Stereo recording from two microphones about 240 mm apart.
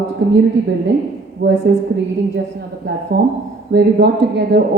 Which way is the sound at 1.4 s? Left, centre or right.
Right.